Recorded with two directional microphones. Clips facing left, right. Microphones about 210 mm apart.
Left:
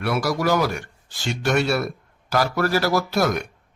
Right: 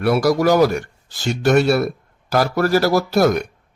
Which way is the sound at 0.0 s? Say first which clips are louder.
Right 7 dB; 40° right (ahead or behind).